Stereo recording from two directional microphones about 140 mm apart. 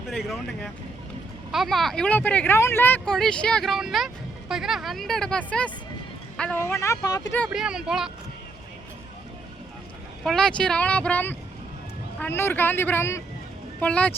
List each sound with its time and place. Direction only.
0.1 s speech: 5° left (ahead or behind)
3.0 s speech: 5° left (ahead or behind); by 7.2 s 25° left (ahead or behind)
7.5 s speech: 5° right (ahead or behind)
10.2 s speech: 5° left (ahead or behind)